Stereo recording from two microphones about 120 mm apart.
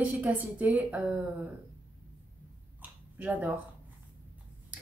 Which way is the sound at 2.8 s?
15° right (ahead or behind).